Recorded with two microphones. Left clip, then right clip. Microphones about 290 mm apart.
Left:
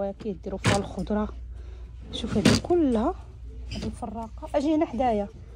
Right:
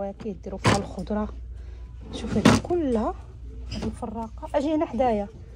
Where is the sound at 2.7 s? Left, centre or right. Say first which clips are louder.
Left 1 dB; left.